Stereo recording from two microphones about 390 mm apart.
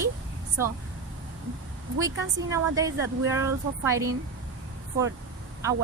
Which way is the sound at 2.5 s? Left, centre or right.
Centre.